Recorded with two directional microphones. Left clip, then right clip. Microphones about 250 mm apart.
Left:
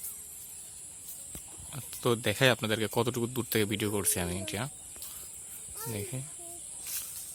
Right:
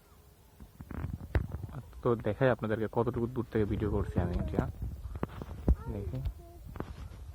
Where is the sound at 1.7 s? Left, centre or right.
Centre.